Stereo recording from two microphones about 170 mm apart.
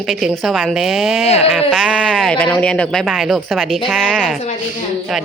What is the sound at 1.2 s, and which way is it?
Speech, 40° left (ahead or behind).